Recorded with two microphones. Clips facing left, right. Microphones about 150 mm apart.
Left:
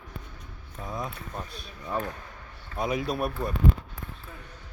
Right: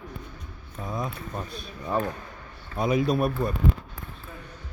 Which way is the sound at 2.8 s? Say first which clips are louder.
Right 5 dB; 5° left (ahead or behind).